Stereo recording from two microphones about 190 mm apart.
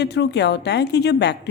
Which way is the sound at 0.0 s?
60° left (ahead or behind).